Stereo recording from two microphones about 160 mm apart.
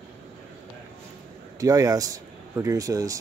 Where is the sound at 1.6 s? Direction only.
20° right (ahead or behind).